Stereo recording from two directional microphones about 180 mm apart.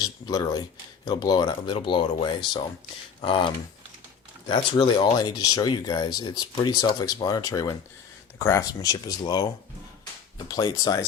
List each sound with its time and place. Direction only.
0.0 s speech: 20° left (ahead or behind)